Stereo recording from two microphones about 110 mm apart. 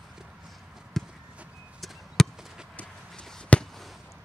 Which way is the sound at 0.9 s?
5° left (ahead or behind).